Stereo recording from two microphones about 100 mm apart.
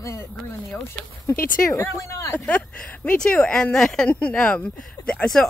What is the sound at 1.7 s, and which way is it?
Speech, 30° left (ahead or behind).